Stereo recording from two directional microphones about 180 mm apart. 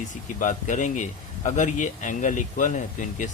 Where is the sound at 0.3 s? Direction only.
45° left (ahead or behind).